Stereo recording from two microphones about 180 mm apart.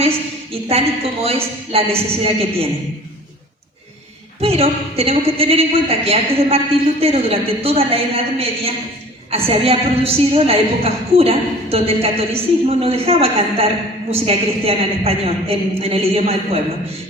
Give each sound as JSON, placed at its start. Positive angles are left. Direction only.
{"t": 0.5, "sound": "a woman's voice", "side_deg": -35}
{"t": 4.4, "sound": "a woman's voice", "side_deg": -35}